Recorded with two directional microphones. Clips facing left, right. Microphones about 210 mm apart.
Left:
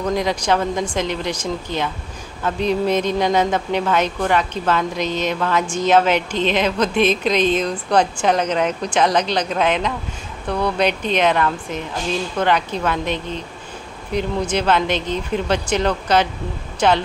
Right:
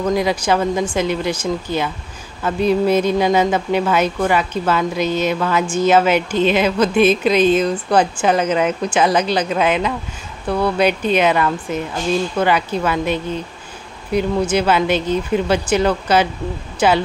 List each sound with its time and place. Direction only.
0.0 s speech: 5° right (ahead or behind)